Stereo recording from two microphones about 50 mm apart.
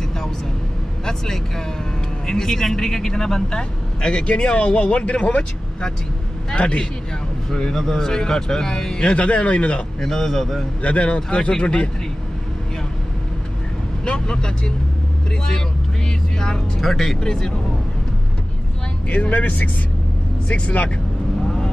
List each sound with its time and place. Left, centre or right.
1.0 s speech: centre
9.1 s speech: left
9.9 s speech: centre
10.8 s speech: left
14.0 s speech: centre
16.3 s speech: centre
16.9 s speech: centre
17.2 s speech: centre
19.0 s speech: left